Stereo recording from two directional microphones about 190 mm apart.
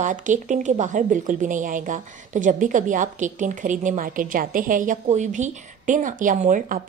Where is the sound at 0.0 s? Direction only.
40° right (ahead or behind).